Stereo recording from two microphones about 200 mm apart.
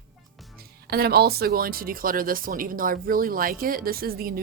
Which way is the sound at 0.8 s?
50° right (ahead or behind).